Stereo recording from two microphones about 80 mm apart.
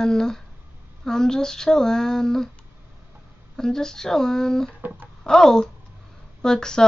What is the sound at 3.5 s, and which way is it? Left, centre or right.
Speech, centre.